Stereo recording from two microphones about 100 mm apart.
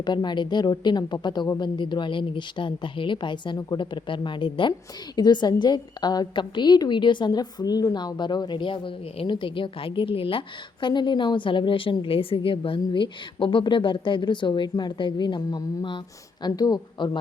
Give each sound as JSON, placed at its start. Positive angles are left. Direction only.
{"t": 0.0, "sound": "a woman's voice", "side_deg": 45}
{"t": 5.1, "sound": "a woman's voice", "side_deg": 45}